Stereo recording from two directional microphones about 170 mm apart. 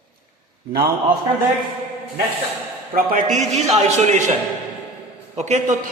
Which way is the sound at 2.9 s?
55° right (ahead or behind).